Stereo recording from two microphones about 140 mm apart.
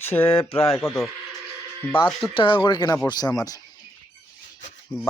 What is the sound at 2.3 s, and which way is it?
Speech, 35° left (ahead or behind).